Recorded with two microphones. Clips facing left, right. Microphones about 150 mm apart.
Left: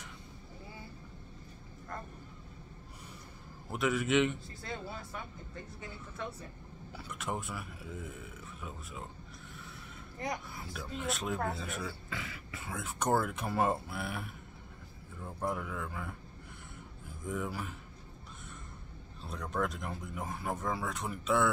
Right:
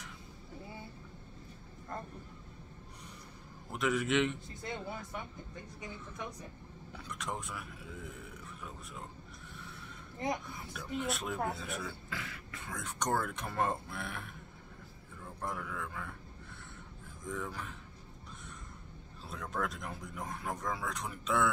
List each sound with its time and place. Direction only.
3.7 s speech: centre (ahead or behind)
4.6 s speech: 20° right (ahead or behind)
6.9 s speech: 5° left (ahead or behind)
10.1 s speech: 25° right (ahead or behind)
10.5 s speech: centre (ahead or behind)
15.4 s speech: 5° left (ahead or behind)
17.3 s speech: 10° left (ahead or behind)
19.2 s speech: centre (ahead or behind)